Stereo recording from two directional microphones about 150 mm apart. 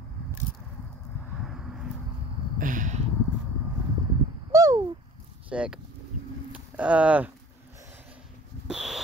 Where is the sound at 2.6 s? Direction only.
60° right (ahead or behind).